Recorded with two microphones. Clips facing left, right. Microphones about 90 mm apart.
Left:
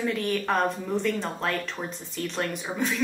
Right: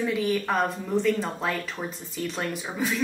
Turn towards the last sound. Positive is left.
turn(degrees=0)  # may be behind; listen again after turning